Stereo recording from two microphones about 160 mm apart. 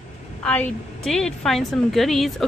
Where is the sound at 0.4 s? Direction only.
5° left (ahead or behind).